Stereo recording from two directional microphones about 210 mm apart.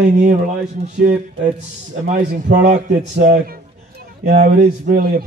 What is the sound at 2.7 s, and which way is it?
A man's voice, 35° right (ahead or behind).